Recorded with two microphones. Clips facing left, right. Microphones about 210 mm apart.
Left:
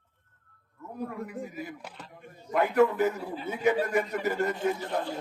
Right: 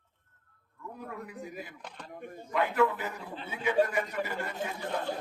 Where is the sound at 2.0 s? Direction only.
55° right (ahead or behind).